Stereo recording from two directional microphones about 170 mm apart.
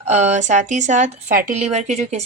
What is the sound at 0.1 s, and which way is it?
A woman's voice, 45° right (ahead or behind).